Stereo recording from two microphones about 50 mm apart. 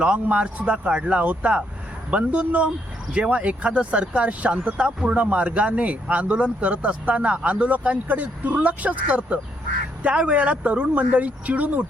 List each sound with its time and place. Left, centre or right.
0.0 s speech: right